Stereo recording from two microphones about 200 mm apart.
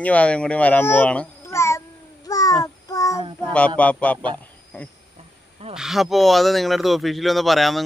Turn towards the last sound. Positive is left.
turn(degrees=0)  # may be behind; listen again after turning